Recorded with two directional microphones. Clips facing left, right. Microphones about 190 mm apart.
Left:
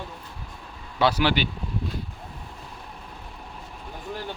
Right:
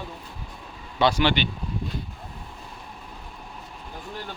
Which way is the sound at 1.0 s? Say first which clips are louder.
Right 1 dB; 5° left (ahead or behind).